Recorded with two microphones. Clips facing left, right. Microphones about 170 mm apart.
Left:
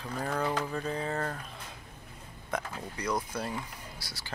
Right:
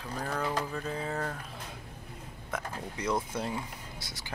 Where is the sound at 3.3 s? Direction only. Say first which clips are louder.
Right 1 dB; 20° right (ahead or behind).